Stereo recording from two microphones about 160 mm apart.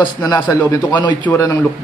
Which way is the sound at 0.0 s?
25° left (ahead or behind).